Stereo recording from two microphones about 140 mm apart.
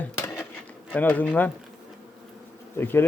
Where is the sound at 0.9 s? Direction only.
10° left (ahead or behind).